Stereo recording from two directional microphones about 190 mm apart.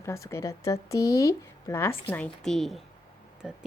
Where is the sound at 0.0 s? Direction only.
15° left (ahead or behind).